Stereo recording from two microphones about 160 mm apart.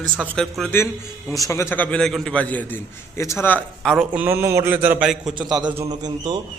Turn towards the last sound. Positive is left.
turn(degrees=-25)  # may be behind; listen again after turning